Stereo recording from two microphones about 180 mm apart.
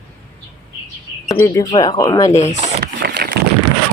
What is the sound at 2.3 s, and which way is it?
Speech, 40° left (ahead or behind).